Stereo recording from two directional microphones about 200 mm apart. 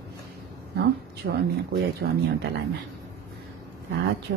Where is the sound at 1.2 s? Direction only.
50° right (ahead or behind).